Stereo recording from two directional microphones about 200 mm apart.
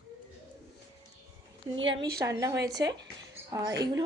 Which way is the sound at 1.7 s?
70° right (ahead or behind).